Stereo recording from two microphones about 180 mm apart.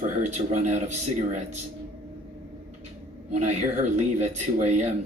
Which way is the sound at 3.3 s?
40° right (ahead or behind).